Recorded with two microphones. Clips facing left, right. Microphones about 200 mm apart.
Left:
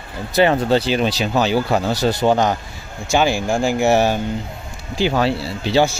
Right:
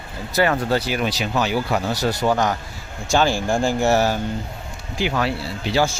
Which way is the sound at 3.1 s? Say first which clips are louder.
Left 2 dB; 10° left (ahead or behind).